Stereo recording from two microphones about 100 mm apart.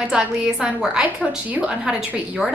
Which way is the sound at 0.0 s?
5° right (ahead or behind).